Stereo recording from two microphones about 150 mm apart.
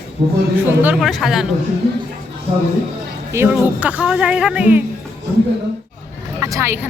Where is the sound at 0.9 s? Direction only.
Centre (ahead or behind).